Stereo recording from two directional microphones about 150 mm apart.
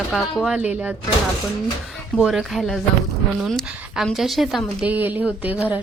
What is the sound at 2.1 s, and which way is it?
Speech, centre (ahead or behind).